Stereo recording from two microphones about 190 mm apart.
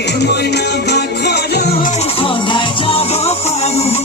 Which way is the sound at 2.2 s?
25° left (ahead or behind).